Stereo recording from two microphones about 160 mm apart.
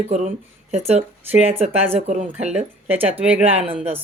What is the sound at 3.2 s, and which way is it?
Speech, 10° right (ahead or behind).